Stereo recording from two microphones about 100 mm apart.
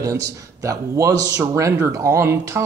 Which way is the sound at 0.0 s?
30° right (ahead or behind).